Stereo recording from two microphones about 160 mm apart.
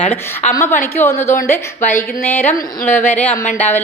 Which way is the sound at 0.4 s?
45° left (ahead or behind).